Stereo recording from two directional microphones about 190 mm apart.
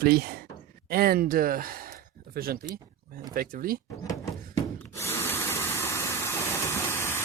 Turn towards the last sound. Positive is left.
turn(degrees=15)  # may be behind; listen again after turning